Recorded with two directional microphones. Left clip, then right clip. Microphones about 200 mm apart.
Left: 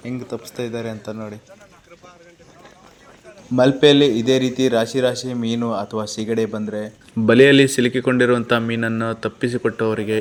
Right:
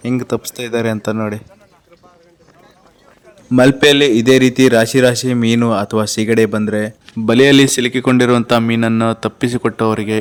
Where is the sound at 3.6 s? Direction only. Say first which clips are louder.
Right 3 dB; 40° right (ahead or behind).